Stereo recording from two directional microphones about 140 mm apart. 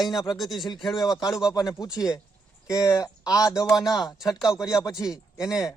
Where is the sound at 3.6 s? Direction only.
Centre (ahead or behind).